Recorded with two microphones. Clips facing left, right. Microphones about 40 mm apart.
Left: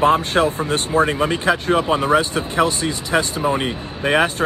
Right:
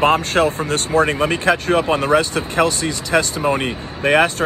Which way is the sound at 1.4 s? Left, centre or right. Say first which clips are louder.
Right 2 dB; centre.